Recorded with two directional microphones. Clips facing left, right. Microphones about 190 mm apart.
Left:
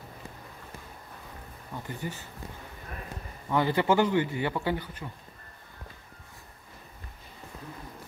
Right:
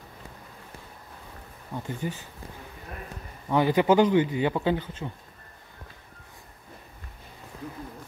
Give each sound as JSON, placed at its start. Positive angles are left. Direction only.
{"t": 1.9, "sound": "speech", "side_deg": -20}
{"t": 3.4, "sound": "speech", "side_deg": -15}